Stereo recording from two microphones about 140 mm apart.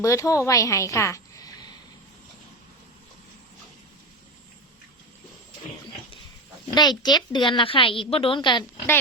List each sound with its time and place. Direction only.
0.0 s a woman's voice: 20° left (ahead or behind)
6.7 s a woman's voice: 30° left (ahead or behind)